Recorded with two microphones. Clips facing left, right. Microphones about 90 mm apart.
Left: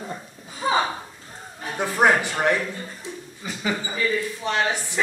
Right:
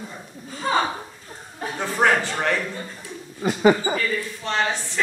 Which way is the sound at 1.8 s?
15° left (ahead or behind).